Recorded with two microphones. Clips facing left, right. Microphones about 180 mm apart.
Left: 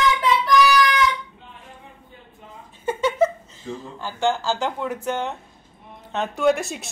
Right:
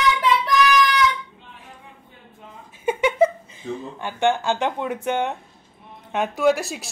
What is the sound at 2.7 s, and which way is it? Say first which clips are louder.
Speech: right 2 dB; 15° right (ahead or behind).